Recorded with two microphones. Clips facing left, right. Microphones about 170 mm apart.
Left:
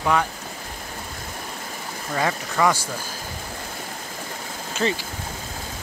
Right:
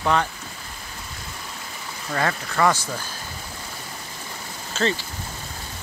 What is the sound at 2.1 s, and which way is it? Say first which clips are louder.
Speech: even; 10° left (ahead or behind).